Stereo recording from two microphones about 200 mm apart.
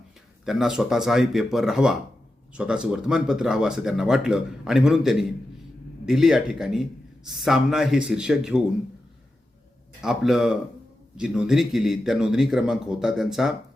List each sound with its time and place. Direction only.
0.4 s speech: centre (ahead or behind)
10.0 s speech: centre (ahead or behind)